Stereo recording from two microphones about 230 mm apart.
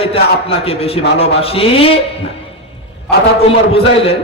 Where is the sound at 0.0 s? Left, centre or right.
Left.